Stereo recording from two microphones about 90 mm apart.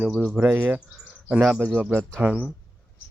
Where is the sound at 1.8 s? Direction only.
20° right (ahead or behind).